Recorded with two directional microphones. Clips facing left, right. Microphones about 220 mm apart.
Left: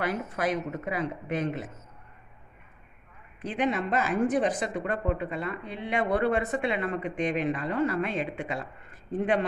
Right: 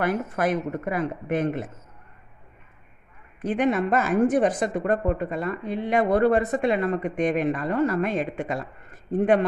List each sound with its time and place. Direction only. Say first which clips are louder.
0.0 s speech: right 5 dB; 55° right (ahead or behind)
3.4 s speech: right 6 dB; 50° right (ahead or behind)